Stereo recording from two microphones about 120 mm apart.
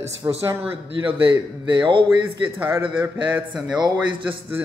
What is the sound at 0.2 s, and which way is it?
Speech, 25° right (ahead or behind).